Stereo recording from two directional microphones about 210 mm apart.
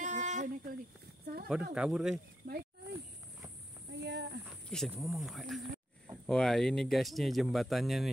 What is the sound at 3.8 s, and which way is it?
Speech, 55° right (ahead or behind).